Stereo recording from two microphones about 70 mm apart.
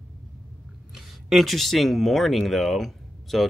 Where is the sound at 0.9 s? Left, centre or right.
Centre.